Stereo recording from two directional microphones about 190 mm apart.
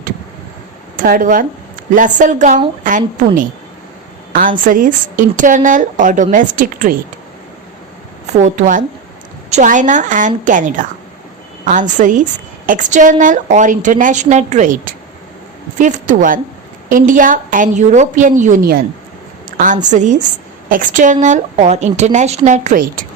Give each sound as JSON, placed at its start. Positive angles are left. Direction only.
{"t": 0.9, "sound": "a woman's voice", "side_deg": -45}
{"t": 8.3, "sound": "a woman's voice", "side_deg": -40}